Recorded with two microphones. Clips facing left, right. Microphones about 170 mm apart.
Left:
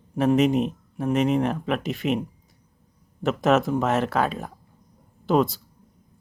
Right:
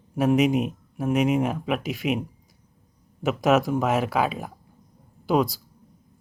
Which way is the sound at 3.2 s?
Centre (ahead or behind).